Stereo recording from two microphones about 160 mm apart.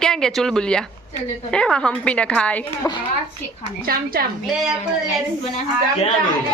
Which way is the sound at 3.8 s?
70° right (ahead or behind).